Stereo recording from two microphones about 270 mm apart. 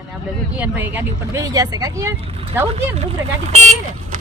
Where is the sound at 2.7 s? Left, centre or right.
Right.